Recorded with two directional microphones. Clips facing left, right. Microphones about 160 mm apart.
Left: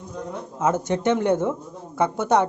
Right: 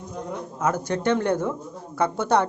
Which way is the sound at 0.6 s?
20° left (ahead or behind).